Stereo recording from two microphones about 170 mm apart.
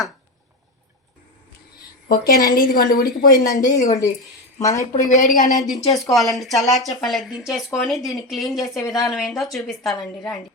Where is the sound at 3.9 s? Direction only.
20° left (ahead or behind).